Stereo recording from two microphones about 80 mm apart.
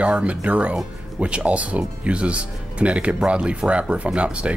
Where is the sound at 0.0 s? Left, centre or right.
Centre.